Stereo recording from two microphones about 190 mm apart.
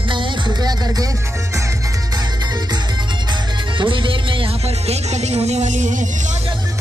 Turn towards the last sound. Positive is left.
turn(degrees=-40)  # may be behind; listen again after turning